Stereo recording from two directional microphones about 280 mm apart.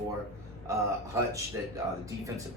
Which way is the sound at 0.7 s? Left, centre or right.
Centre.